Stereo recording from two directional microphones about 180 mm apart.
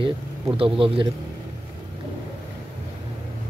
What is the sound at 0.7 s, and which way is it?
Speech, 30° right (ahead or behind).